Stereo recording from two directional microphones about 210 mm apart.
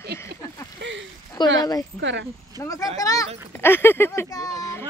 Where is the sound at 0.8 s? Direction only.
60° right (ahead or behind).